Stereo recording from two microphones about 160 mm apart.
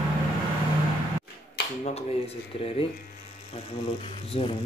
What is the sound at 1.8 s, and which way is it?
Speech, 40° left (ahead or behind).